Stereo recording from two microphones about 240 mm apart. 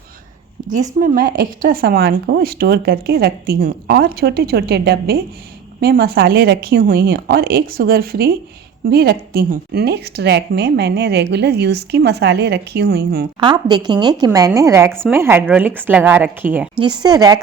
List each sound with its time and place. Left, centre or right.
0.9 s a woman's voice: right
13.4 s a woman's voice: centre